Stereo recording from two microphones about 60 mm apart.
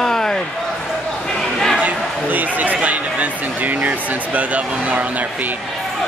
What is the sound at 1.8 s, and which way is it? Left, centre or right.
Speech, right.